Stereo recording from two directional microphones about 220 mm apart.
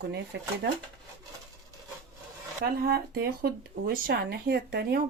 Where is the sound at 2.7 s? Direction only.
45° right (ahead or behind).